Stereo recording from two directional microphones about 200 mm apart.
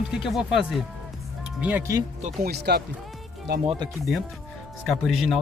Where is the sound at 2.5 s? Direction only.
55° right (ahead or behind).